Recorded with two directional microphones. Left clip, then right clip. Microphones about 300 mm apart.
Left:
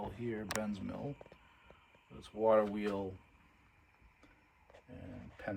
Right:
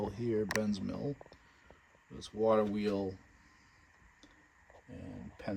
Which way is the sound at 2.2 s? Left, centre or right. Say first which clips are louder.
Even; centre.